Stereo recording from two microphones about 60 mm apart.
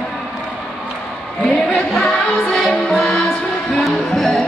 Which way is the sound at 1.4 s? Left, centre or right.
Centre.